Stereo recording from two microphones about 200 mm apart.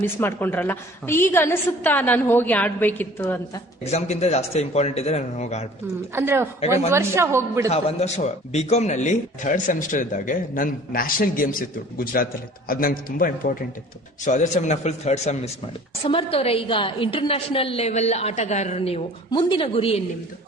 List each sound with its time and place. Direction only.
0.0 s a woman's voice: 10° left (ahead or behind)
3.9 s speech: 35° left (ahead or behind)
6.1 s a woman's voice: 10° right (ahead or behind)
7.7 s a man's voice: 30° left (ahead or behind)